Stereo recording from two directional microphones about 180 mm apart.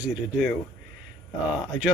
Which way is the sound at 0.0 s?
5° right (ahead or behind).